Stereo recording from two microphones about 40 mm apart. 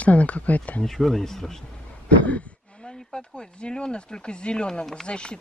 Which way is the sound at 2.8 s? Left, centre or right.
Centre.